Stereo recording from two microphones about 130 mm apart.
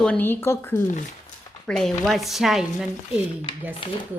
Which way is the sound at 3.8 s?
40° left (ahead or behind).